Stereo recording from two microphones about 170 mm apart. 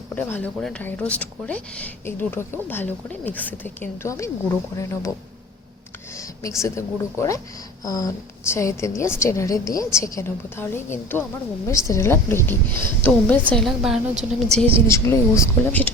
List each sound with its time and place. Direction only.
0.1 s a woman's voice: 10° left (ahead or behind)
6.1 s a woman's voice: 15° left (ahead or behind); by 14.7 s centre (ahead or behind)
14.8 s a woman's voice: 15° left (ahead or behind)